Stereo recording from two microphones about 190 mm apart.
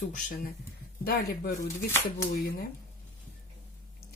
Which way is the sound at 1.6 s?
15° left (ahead or behind).